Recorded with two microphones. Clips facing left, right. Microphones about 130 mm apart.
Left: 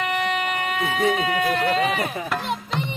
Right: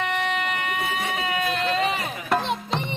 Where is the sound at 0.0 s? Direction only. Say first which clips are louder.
Left 2 dB; 10° left (ahead or behind).